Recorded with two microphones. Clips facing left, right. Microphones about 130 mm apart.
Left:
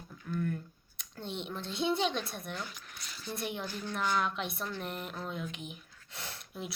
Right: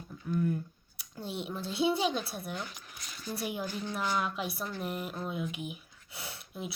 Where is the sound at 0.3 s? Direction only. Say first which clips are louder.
Right 4 dB; 15° right (ahead or behind).